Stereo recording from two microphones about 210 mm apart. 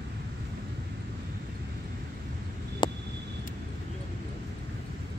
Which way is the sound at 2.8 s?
20° left (ahead or behind).